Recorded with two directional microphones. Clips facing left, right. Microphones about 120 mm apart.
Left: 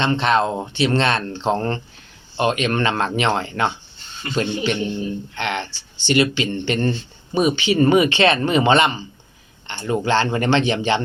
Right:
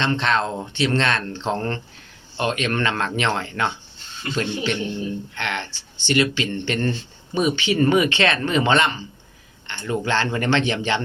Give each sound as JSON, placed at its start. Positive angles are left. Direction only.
{"t": 0.0, "sound": "speech", "side_deg": 15}
{"t": 9.7, "sound": "speech", "side_deg": 25}